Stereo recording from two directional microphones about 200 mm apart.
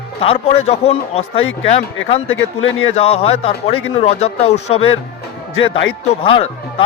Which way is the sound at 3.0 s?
30° left (ahead or behind).